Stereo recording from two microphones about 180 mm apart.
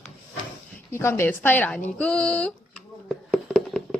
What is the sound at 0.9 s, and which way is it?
Speech, 15° left (ahead or behind).